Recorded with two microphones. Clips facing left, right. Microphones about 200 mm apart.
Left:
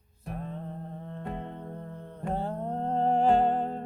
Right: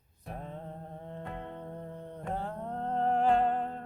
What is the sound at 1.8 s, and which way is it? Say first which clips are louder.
Music: even; 15° right (ahead or behind).